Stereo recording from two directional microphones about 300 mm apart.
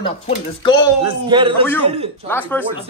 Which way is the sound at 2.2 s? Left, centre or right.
Centre.